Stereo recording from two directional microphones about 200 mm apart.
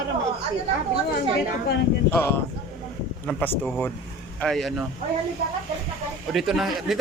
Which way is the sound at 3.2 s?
5° left (ahead or behind).